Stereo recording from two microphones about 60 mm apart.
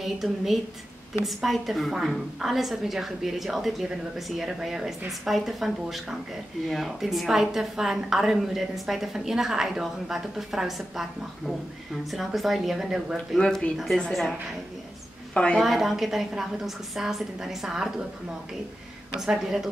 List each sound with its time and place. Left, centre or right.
0.0 s a woman's voice: centre
13.4 s speech: centre
15.3 s a woman's voice: centre
15.6 s a woman's voice: centre
19.2 s speech: centre